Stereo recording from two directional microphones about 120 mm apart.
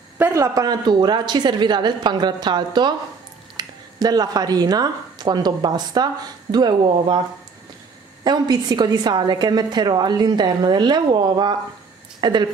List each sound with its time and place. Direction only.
0.2 s a woman's voice: 25° right (ahead or behind)
8.2 s a woman's voice: 35° right (ahead or behind)